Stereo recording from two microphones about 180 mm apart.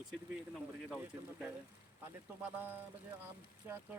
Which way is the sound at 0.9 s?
5° right (ahead or behind).